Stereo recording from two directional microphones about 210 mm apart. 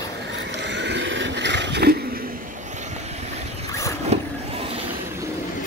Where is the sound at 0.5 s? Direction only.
55° right (ahead or behind); by 3.2 s 30° right (ahead or behind).